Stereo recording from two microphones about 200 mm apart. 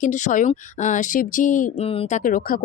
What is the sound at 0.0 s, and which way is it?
Speech, 40° left (ahead or behind).